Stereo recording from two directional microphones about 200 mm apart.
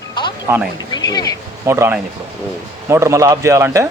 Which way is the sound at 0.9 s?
20° left (ahead or behind).